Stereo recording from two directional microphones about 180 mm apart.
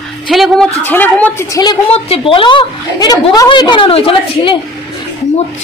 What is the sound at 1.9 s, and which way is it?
A woman's voice, 35° left (ahead or behind).